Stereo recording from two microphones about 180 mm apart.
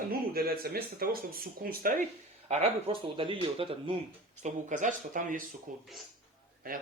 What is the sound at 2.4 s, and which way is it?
Speech, 35° right (ahead or behind).